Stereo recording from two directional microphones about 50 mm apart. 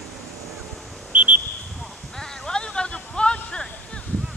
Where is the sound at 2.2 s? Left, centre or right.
Centre.